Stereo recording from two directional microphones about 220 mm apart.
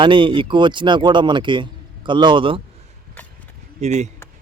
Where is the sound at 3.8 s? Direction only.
30° right (ahead or behind).